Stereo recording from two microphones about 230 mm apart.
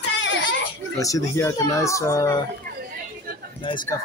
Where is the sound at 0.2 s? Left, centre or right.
Left.